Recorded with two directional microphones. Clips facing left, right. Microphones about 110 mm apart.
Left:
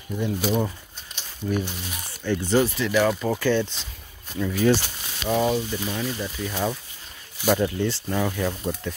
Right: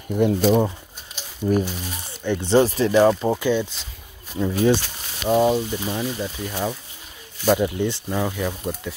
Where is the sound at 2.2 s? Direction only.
20° right (ahead or behind).